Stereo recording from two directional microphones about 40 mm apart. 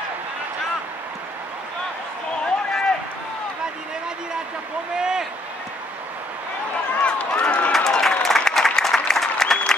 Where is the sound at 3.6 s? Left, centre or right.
Right.